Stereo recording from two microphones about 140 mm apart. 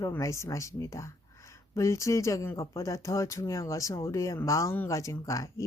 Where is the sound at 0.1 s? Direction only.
20° left (ahead or behind).